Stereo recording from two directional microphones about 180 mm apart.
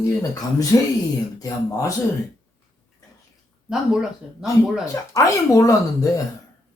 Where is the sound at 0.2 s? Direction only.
20° left (ahead or behind).